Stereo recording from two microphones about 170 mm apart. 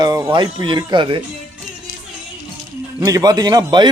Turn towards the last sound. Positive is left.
turn(degrees=-25)  # may be behind; listen again after turning